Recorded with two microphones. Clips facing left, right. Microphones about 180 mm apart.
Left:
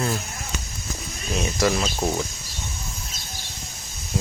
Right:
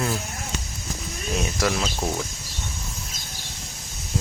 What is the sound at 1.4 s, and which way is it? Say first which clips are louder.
Speech: left 4 dB; 5° right (ahead or behind).